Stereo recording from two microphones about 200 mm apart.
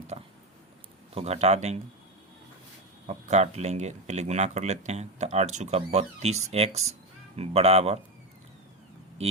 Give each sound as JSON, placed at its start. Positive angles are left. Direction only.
{"t": 0.1, "sound": "a sound", "side_deg": -30}
{"t": 1.1, "sound": "speech", "side_deg": -30}
{"t": 3.1, "sound": "speech", "side_deg": -35}